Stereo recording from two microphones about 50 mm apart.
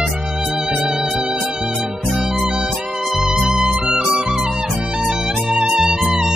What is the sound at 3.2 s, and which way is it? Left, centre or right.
Music, centre.